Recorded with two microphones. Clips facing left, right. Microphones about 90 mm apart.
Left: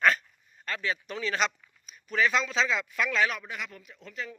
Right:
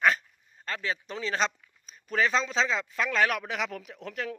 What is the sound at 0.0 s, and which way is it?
Speech, 20° right (ahead or behind).